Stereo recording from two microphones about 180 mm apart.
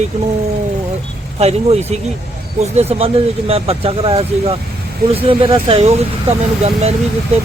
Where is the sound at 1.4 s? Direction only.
35° right (ahead or behind).